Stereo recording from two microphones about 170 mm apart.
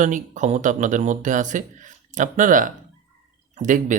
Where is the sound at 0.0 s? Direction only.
45° right (ahead or behind).